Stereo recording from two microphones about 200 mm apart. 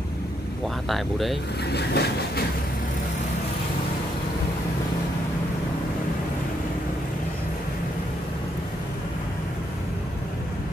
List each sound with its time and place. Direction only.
0.8 s speech: centre (ahead or behind)
1.7 s vehicle: 55° left (ahead or behind)